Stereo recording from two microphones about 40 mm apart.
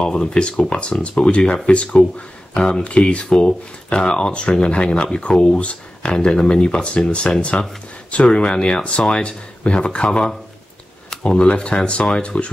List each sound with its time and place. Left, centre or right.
0.0 s speech: left